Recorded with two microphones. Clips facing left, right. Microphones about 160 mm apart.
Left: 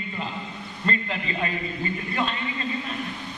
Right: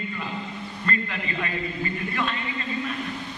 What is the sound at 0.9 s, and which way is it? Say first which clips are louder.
Speech: left 2 dB; 25° left (ahead or behind).